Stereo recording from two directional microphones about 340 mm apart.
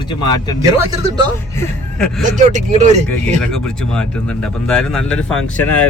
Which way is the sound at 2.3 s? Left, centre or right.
Right.